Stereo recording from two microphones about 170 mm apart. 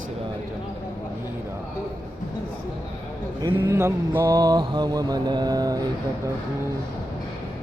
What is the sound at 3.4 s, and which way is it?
Mantra, 15° right (ahead or behind).